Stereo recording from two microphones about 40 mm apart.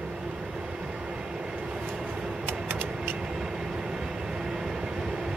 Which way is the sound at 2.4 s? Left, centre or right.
Right.